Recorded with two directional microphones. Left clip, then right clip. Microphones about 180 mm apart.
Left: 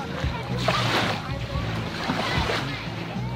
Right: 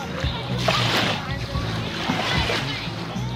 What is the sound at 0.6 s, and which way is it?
Music, 20° left (ahead or behind).